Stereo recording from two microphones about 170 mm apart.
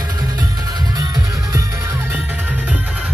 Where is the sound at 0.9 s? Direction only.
20° right (ahead or behind).